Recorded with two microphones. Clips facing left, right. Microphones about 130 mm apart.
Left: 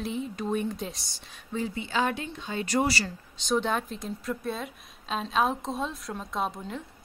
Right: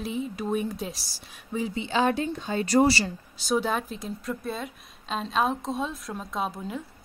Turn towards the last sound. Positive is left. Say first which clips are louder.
# right 1 dB
turn(degrees=-5)  # may be behind; listen again after turning